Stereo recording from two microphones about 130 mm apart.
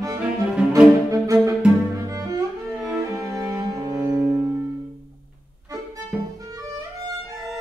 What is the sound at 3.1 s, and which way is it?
Music, 25° right (ahead or behind).